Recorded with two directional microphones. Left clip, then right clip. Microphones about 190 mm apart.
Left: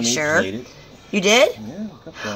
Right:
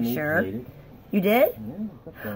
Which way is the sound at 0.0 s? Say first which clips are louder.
Left 6 dB; 5° right (ahead or behind).